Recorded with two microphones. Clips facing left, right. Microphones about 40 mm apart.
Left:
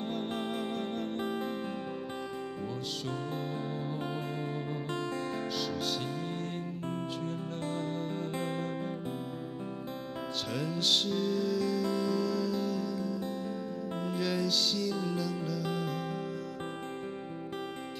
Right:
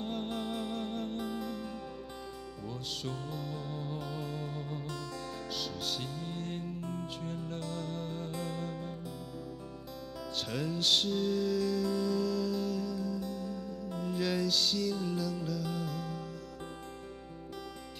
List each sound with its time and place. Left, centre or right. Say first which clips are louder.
0.0 s music: left 2 dB; centre
3.3 s music: left 4 dB; centre
4.0 s music: left 3 dB; left
5.6 s music: left 4 dB; centre
6.8 s music: left 3 dB; left
7.7 s music: left 4 dB; centre
8.3 s music: left 4 dB; centre
10.5 s music: even; centre
13.2 s music: left 2 dB; centre
14.0 s music: even; centre